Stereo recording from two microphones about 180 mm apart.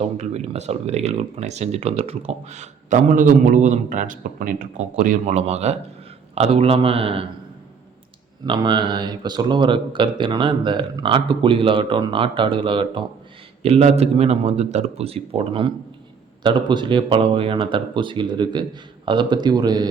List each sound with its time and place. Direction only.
0.0 s speech: 35° right (ahead or behind)
8.4 s speech: 25° right (ahead or behind)